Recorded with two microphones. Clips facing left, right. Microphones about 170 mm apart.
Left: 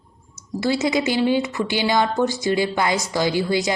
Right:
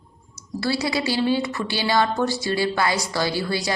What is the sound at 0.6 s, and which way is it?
A woman's voice, 20° left (ahead or behind).